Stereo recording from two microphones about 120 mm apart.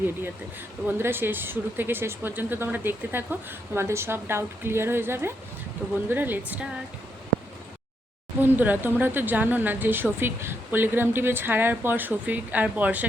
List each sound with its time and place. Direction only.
0.9 s a woman's voice: 20° right (ahead or behind)
8.4 s speech: 15° right (ahead or behind)